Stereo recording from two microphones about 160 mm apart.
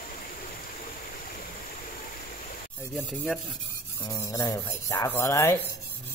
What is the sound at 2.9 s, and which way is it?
Rub, centre (ahead or behind).